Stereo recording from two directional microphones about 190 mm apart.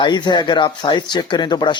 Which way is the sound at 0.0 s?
25° left (ahead or behind).